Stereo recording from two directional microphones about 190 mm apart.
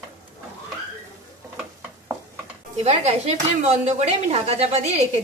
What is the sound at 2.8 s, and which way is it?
A woman's voice, 35° right (ahead or behind).